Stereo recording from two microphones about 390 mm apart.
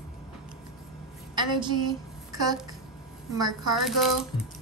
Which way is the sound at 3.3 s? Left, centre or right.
Centre.